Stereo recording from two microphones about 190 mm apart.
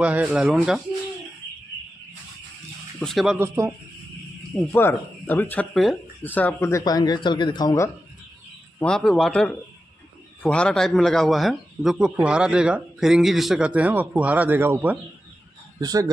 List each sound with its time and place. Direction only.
0.0 s a man's voice: 5° right (ahead or behind)
3.0 s a man's voice: centre (ahead or behind)
3.3 s speech: 15° right (ahead or behind)
4.5 s speech: 10° left (ahead or behind)
8.7 s a man's voice: 5° left (ahead or behind); by 16.1 s 20° right (ahead or behind)